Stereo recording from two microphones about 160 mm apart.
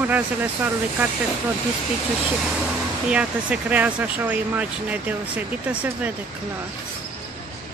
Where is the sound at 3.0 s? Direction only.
5° right (ahead or behind).